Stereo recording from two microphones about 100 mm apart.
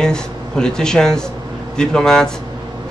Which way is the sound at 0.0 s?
5° left (ahead or behind).